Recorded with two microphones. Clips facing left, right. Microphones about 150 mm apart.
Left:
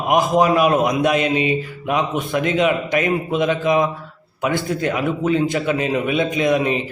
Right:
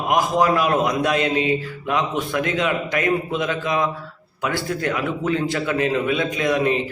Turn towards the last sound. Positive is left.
turn(degrees=20)  # may be behind; listen again after turning